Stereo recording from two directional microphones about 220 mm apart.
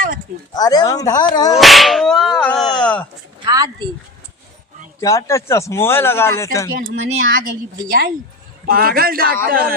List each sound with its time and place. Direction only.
0.5 s speech: 15° left (ahead or behind)
1.5 s whip: centre (ahead or behind)
2.8 s speech: 5° left (ahead or behind)
3.4 s speech: 20° right (ahead or behind)
4.9 s speech: 15° left (ahead or behind)
7.2 s a woman's voice: 45° right (ahead or behind)